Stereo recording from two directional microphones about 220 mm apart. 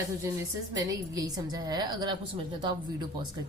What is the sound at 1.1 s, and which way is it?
A woman's voice, 15° right (ahead or behind).